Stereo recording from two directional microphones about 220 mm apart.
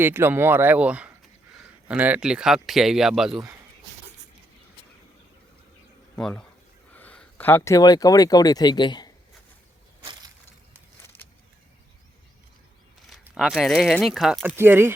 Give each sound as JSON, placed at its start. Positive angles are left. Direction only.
{"t": 0.0, "sound": "speech", "side_deg": -10}
{"t": 6.1, "sound": "speech", "side_deg": 5}
{"t": 10.0, "sound": "crushing", "side_deg": -20}
{"t": 13.1, "sound": "speech", "side_deg": 0}